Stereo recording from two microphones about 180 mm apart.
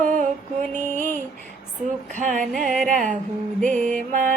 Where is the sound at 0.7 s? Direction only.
45° right (ahead or behind).